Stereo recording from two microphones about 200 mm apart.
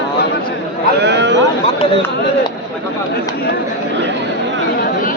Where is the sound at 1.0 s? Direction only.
60° right (ahead or behind).